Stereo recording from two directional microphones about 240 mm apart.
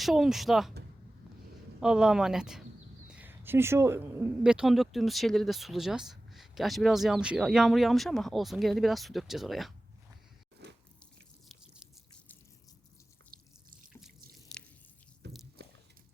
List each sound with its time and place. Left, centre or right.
0.0 s speech: centre
1.8 s speech: centre
10.6 s biting: right
13.3 s drip: right
14.5 s drip: centre
15.2 s a sound: right